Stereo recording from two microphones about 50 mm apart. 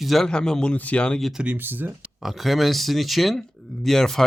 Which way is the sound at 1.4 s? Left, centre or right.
Right.